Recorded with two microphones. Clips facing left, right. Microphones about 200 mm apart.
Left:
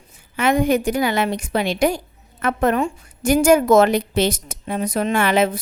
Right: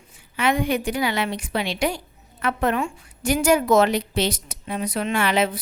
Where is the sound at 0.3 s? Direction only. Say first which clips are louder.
Left 5 dB; 45° left (ahead or behind).